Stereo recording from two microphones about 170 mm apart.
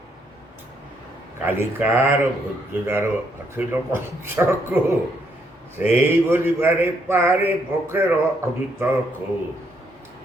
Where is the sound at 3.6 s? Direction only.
15° right (ahead or behind).